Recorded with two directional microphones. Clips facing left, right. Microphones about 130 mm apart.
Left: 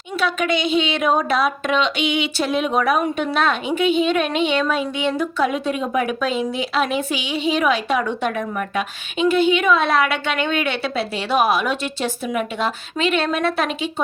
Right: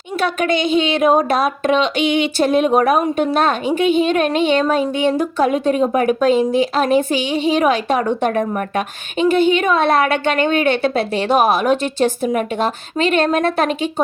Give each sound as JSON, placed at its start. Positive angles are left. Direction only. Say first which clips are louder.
{"t": 0.2, "sound": "a woman's voice", "louder": "right 3 dB", "side_deg": -50}